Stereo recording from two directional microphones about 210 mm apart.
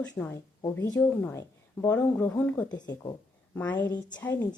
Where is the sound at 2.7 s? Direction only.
20° left (ahead or behind).